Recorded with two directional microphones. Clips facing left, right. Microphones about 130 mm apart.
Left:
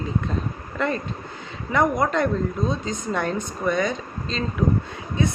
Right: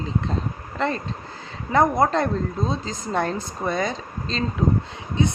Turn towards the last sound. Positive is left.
turn(degrees=-20)  # may be behind; listen again after turning